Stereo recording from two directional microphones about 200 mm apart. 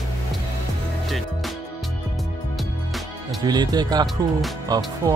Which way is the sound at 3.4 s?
20° right (ahead or behind).